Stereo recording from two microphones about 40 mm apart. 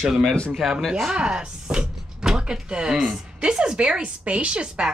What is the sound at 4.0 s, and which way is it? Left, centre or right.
Speech, right.